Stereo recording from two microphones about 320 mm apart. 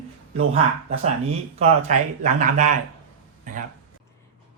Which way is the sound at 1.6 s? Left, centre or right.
Right.